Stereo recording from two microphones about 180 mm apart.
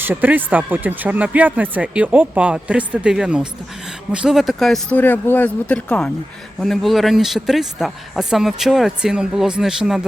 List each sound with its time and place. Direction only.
0.0 s speech: 10° right (ahead or behind)